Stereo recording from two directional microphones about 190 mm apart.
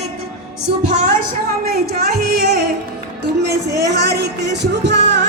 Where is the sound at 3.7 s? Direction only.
60° right (ahead or behind).